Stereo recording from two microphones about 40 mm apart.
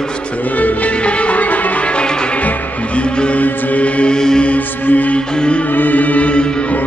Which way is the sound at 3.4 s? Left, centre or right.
Left.